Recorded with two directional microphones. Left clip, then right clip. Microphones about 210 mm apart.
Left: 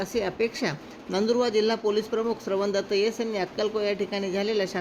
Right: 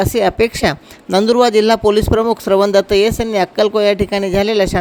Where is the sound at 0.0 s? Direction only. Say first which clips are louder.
Right 13 dB; 50° right (ahead or behind).